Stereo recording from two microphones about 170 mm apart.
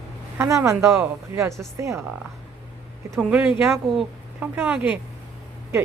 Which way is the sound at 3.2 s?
5° right (ahead or behind).